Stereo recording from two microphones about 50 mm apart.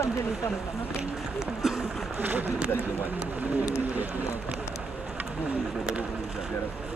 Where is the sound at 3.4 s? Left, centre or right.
Right.